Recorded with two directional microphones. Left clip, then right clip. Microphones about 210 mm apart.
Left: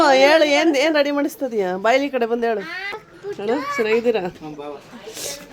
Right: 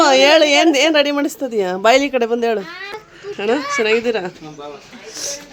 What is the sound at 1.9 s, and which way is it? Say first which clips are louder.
Speech: right 5 dB; 15° right (ahead or behind).